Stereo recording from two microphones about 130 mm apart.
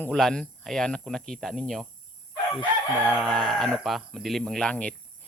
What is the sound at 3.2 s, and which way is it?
Speech, 5° left (ahead or behind).